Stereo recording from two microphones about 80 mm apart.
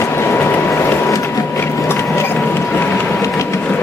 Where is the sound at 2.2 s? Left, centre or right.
Left.